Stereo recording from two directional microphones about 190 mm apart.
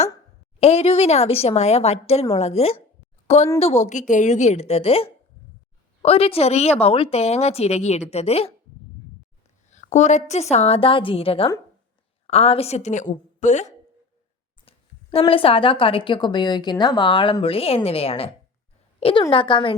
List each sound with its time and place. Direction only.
0.6 s a woman's voice: 30° left (ahead or behind)
9.6 s a woman's voice: 40° left (ahead or behind)